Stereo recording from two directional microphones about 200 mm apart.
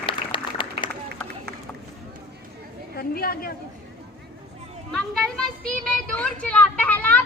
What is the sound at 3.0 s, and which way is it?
Chatter, 50° left (ahead or behind).